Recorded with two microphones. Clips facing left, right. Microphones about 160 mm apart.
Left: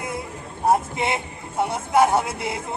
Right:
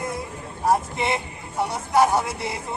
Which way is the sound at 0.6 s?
25° left (ahead or behind).